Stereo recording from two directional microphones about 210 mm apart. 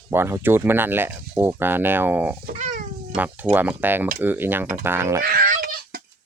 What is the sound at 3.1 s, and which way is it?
Speech, 10° right (ahead or behind).